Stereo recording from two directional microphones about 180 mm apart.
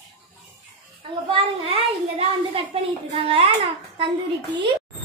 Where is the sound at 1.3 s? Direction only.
30° right (ahead or behind).